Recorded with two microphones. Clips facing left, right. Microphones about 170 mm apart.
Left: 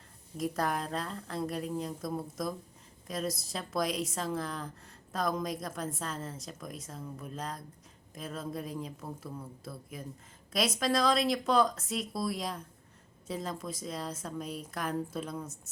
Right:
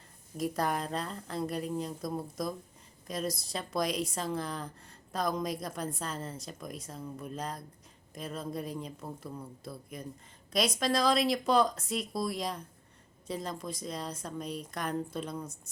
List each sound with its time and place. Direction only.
0.3 s a woman's voice: centre (ahead or behind)